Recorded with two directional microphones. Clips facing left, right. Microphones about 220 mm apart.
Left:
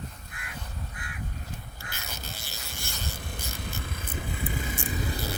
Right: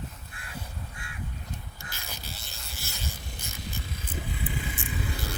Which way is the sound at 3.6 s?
55° left (ahead or behind).